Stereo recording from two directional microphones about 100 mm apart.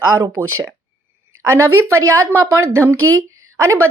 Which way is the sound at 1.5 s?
25° right (ahead or behind).